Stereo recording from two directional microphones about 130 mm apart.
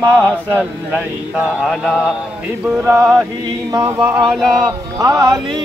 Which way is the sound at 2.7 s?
25° right (ahead or behind).